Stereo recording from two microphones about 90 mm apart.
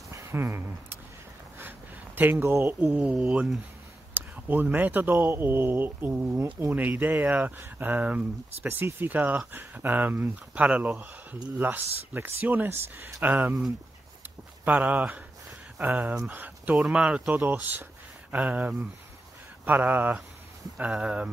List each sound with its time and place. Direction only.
0.1 s a sound: 30° right (ahead or behind)
2.1 s speech: 25° right (ahead or behind); by 3.5 s 5° right (ahead or behind)
4.1 s speech: 20° right (ahead or behind)
14.6 s speech: 20° right (ahead or behind)
16.7 s speech: 10° right (ahead or behind)
17.5 s speech: 20° right (ahead or behind)